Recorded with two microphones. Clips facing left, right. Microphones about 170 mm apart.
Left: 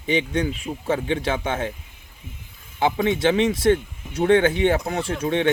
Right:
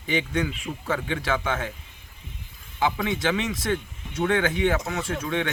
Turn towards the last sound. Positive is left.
turn(degrees=25)  # may be behind; listen again after turning